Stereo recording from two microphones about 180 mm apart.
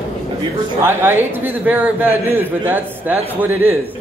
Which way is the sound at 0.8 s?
10° right (ahead or behind).